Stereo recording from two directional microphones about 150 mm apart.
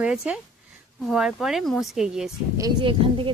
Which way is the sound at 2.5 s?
30° right (ahead or behind).